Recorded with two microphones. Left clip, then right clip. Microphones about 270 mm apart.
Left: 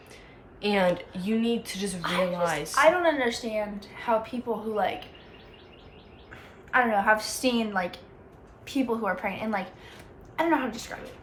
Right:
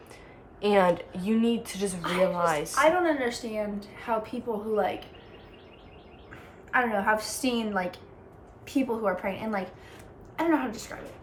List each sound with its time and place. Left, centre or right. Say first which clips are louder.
0.6 s a woman's voice: right 2 dB; centre
2.0 s a woman's voice: left 1 dB; centre
2.3 s a woman's voice: right 1 dB; centre
3.0 s a woman's voice: left 2 dB; centre
6.7 s a woman's voice: left 3 dB; centre